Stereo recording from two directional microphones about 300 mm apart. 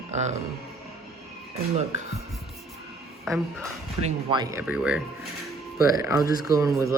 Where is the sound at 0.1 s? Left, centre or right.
Right.